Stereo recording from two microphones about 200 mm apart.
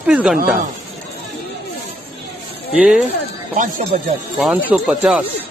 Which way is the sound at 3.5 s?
40° right (ahead or behind).